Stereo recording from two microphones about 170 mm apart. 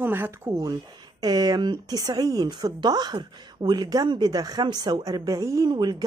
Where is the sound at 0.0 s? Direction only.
10° right (ahead or behind).